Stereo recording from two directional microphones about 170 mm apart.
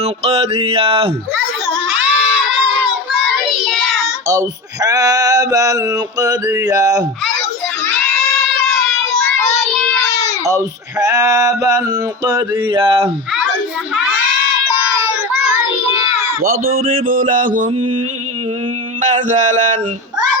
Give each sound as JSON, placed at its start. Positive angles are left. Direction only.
{"t": 0.0, "sound": "mantra", "side_deg": -35}
{"t": 1.7, "sound": "children shouting", "side_deg": -5}
{"t": 3.7, "sound": "child singing", "side_deg": 0}
{"t": 4.3, "sound": "male singing", "side_deg": -20}
{"t": 8.6, "sound": "child singing", "side_deg": 0}
{"t": 10.0, "sound": "child singing", "side_deg": 20}
{"t": 11.0, "sound": "male singing", "side_deg": -20}
{"t": 16.4, "sound": "speech", "side_deg": -55}
{"t": 19.0, "sound": "speech", "side_deg": -45}